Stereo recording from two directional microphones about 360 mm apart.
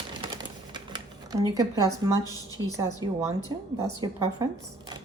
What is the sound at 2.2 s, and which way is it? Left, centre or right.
Speech, centre.